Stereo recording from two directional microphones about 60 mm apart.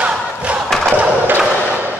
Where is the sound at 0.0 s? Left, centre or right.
Right.